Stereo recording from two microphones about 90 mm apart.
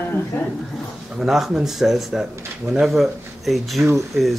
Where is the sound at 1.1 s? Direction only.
5° right (ahead or behind).